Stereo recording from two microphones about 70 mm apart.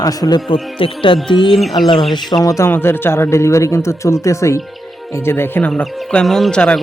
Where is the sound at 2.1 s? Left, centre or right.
Left.